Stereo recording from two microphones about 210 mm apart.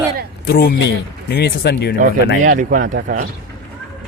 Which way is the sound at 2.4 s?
40° right (ahead or behind).